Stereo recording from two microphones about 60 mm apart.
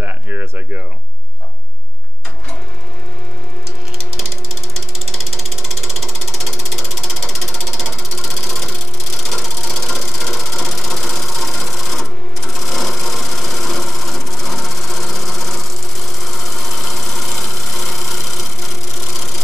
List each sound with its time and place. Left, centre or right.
0.0 s a sound: right
5.1 s ratchet: centre
8.5 s sewing machine: centre
16.3 s engine: centre